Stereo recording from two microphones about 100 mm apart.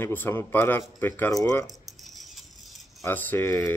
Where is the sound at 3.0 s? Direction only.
20° left (ahead or behind).